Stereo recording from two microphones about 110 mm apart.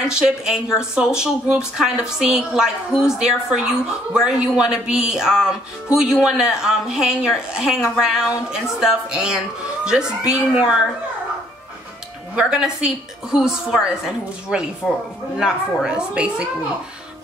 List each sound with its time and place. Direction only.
0.1 s a woman's voice: 5° right (ahead or behind)
12.4 s a woman's voice: 5° right (ahead or behind)